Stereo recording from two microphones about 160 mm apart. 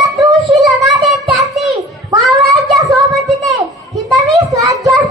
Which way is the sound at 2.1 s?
Centre (ahead or behind).